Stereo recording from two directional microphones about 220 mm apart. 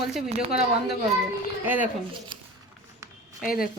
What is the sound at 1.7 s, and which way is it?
Speech, 10° right (ahead or behind).